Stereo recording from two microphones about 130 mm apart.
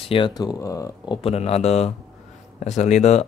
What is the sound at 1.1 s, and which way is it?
Speech, 50° left (ahead or behind).